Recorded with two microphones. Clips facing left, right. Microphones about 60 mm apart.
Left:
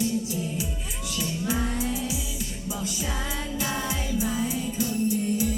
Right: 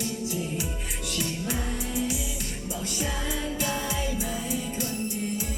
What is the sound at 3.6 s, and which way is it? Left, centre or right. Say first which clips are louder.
Music: even; right.